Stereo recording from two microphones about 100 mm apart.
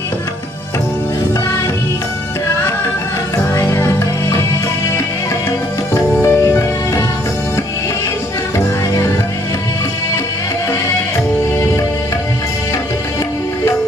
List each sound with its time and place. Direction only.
3.3 s music: 30° left (ahead or behind)
6.2 s music: 25° left (ahead or behind)